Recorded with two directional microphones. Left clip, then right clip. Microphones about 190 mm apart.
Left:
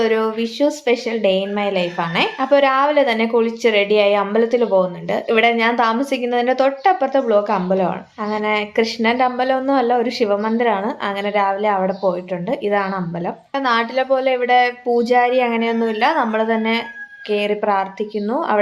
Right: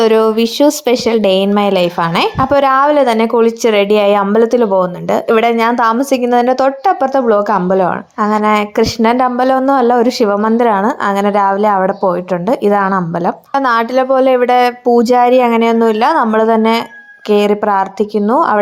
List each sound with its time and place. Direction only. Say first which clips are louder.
0.0 s speech: right 8 dB; 50° right (ahead or behind)